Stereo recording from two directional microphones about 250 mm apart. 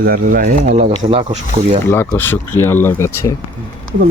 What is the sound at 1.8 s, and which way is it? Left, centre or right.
Speech, centre.